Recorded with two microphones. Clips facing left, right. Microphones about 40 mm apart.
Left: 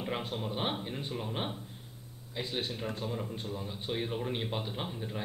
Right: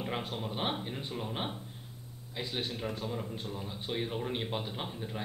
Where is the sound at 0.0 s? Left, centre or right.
Centre.